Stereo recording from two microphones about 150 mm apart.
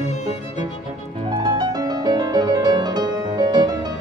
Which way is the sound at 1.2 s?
30° right (ahead or behind).